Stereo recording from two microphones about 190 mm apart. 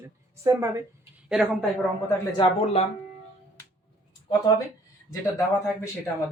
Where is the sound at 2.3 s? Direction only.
30° left (ahead or behind).